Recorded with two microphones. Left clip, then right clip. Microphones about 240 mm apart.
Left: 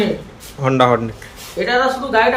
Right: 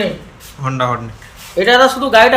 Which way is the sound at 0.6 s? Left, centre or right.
Centre.